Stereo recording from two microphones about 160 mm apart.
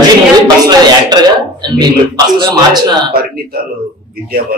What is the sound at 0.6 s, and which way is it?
A man's voice, 25° right (ahead or behind).